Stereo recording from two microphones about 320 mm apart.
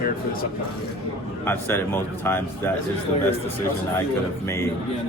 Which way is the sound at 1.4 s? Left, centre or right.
Centre.